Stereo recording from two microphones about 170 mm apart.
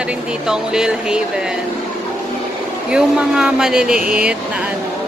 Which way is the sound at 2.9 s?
5° right (ahead or behind).